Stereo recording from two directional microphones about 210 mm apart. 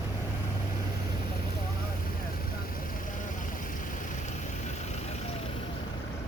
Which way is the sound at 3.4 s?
40° left (ahead or behind).